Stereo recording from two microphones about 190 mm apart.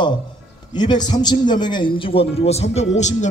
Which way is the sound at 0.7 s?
25° left (ahead or behind).